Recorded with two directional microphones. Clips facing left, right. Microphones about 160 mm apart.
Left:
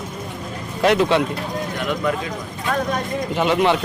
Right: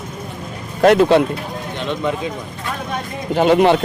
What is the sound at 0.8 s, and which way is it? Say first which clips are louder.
Speech: right 5 dB; 45° right (ahead or behind).